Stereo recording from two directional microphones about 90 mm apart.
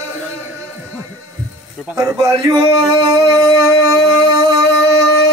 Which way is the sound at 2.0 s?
30° right (ahead or behind).